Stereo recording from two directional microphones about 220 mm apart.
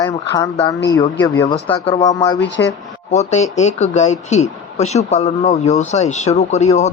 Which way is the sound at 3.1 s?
30° left (ahead or behind).